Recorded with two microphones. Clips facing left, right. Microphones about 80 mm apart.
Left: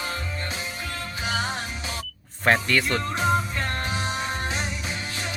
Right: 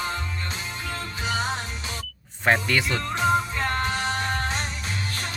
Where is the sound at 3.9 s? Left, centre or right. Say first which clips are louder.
Right 2 dB; centre.